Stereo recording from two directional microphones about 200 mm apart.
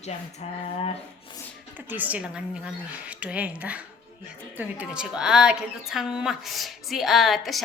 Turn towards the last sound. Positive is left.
turn(degrees=0)  # may be behind; listen again after turning